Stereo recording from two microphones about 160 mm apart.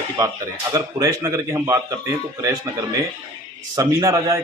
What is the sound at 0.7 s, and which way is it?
A man's voice, 20° right (ahead or behind).